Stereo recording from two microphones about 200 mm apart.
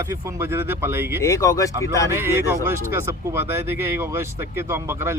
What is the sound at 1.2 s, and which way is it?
Speech, 15° left (ahead or behind).